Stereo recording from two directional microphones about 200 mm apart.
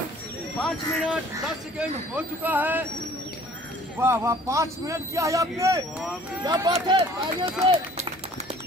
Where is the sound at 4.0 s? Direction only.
15° right (ahead or behind).